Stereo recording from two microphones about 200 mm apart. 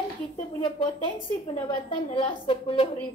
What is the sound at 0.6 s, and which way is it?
A woman's voice, 25° left (ahead or behind).